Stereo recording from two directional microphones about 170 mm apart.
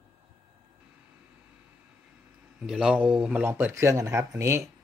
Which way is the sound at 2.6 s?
5° right (ahead or behind).